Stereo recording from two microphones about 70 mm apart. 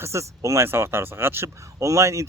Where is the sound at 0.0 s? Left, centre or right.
Right.